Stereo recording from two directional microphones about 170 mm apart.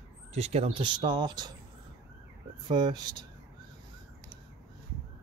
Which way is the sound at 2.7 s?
25° right (ahead or behind).